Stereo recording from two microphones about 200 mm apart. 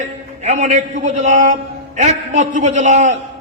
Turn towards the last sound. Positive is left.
turn(degrees=-35)  # may be behind; listen again after turning